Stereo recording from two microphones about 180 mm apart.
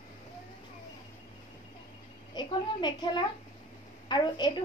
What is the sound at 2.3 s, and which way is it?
A woman's voice, 25° left (ahead or behind).